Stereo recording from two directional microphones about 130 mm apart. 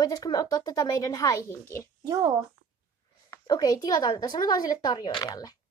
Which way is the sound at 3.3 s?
30° left (ahead or behind).